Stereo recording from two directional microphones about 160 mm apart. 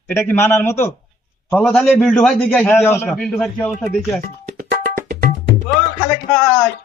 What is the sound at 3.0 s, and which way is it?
A man's voice, centre (ahead or behind).